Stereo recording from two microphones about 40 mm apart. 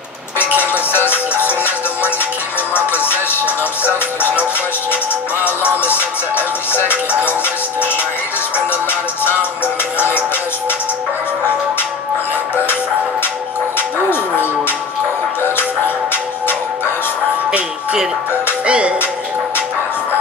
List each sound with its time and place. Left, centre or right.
0.6 s music: left
2.7 s music: left
18.7 s speech: right